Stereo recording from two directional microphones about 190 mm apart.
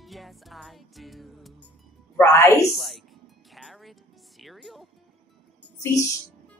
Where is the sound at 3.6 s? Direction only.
Centre (ahead or behind).